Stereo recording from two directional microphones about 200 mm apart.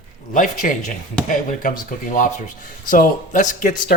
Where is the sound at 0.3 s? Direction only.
40° left (ahead or behind).